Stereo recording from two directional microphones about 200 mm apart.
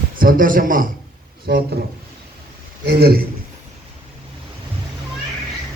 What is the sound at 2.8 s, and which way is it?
Speech, 50° right (ahead or behind).